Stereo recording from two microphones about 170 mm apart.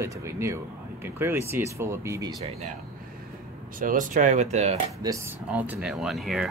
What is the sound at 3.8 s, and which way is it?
Speech, 50° right (ahead or behind).